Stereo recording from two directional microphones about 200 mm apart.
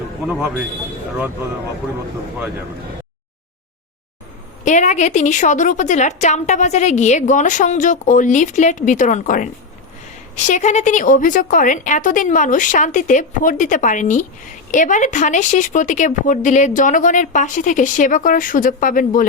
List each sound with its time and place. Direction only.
4.6 s a woman's voice: 35° left (ahead or behind)